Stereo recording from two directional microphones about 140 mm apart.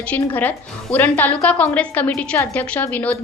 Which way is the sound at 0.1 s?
10° left (ahead or behind).